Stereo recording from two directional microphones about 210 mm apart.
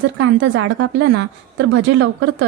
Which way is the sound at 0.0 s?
60° right (ahead or behind).